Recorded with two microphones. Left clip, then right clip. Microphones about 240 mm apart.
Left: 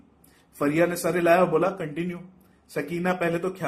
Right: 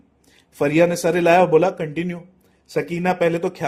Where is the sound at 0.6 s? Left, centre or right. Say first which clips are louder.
Right 6 dB; right.